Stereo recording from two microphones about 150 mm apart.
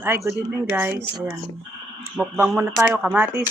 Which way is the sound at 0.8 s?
15° right (ahead or behind).